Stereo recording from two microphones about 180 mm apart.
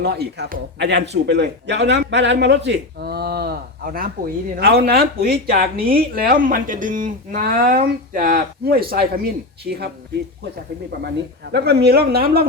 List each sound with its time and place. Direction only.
0.0 s a man's voice: 65° right (ahead or behind)
11.5 s speech: 65° right (ahead or behind)